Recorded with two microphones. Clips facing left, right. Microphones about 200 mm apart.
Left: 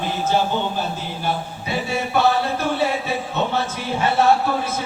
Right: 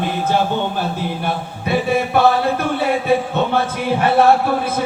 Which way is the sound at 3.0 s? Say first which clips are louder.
Right 7 dB; 55° right (ahead or behind).